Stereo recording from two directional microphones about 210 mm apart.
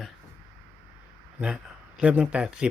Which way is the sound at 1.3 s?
5° right (ahead or behind).